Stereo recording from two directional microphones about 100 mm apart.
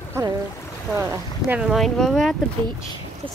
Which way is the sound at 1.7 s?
Centre (ahead or behind).